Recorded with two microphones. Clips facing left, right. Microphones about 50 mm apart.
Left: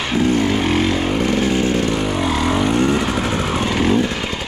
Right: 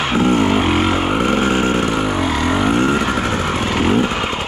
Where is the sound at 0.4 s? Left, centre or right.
Centre.